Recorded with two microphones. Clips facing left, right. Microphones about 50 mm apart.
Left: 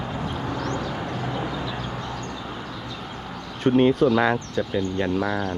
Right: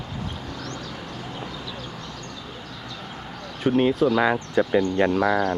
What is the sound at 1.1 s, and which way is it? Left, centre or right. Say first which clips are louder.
Vehicle: left 6 dB; left.